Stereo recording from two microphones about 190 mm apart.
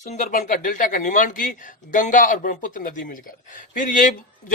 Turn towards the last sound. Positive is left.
turn(degrees=45)  # may be behind; listen again after turning